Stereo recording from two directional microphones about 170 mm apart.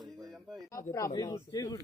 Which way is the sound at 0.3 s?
Centre (ahead or behind).